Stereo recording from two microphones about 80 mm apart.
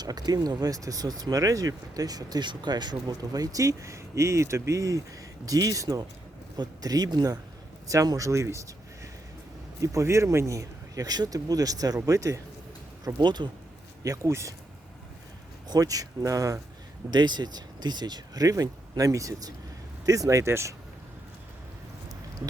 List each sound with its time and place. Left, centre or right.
0.0 s speech: right
7.9 s speech: right
9.8 s speech: right
13.1 s speech: right
14.0 s speech: right
14.3 s speech: right
15.6 s speech: right
17.1 s speech: right
18.4 s speech: right